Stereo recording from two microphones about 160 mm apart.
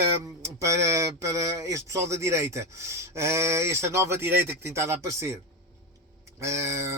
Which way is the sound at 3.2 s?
15° right (ahead or behind).